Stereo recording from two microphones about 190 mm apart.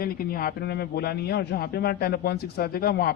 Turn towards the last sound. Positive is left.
turn(degrees=55)  # may be behind; listen again after turning